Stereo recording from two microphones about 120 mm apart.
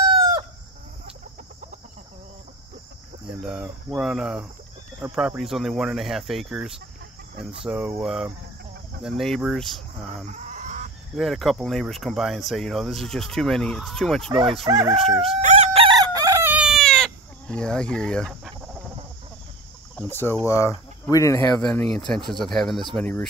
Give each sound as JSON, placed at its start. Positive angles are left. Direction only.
{"t": 0.0, "sound": "chicken", "side_deg": -35}
{"t": 3.3, "sound": "cricket", "side_deg": -5}
{"t": 5.0, "sound": "speech", "side_deg": -10}
{"t": 10.2, "sound": "chicken", "side_deg": -85}
{"t": 11.1, "sound": "speech", "side_deg": 0}
{"t": 14.7, "sound": "crowing", "side_deg": -30}
{"t": 15.4, "sound": "chicken", "side_deg": -75}
{"t": 15.8, "sound": "chicken", "side_deg": -35}
{"t": 16.4, "sound": "chicken", "side_deg": -5}
{"t": 20.0, "sound": "speech", "side_deg": 20}
{"t": 21.5, "sound": "speech", "side_deg": 10}